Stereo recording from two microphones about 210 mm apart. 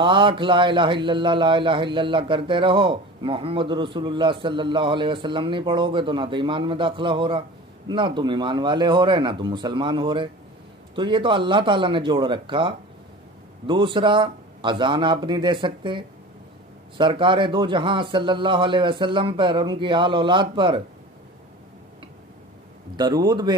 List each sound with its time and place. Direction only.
0.0 s speech: 25° right (ahead or behind)
22.9 s speech: 20° right (ahead or behind)